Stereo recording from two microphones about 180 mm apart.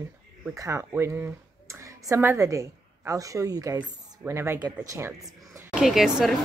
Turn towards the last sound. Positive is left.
turn(degrees=0)  # may be behind; listen again after turning